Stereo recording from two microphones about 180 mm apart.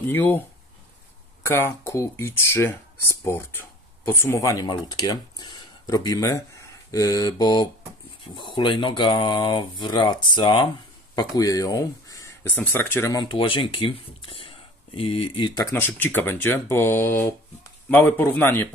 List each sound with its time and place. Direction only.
0.1 s speech: 10° left (ahead or behind)
1.4 s speech: 15° left (ahead or behind)
15.7 s speech: 10° left (ahead or behind)